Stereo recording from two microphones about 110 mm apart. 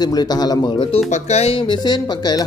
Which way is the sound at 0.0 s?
40° left (ahead or behind).